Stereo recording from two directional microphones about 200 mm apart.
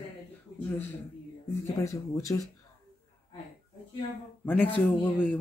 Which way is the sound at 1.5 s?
15° left (ahead or behind).